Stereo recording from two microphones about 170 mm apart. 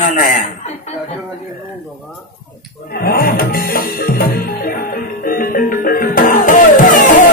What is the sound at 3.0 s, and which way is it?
Music, 60° left (ahead or behind).